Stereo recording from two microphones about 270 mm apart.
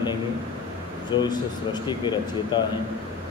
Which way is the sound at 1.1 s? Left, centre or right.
Centre.